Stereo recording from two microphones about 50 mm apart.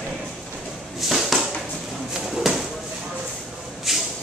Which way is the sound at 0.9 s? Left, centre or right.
Centre.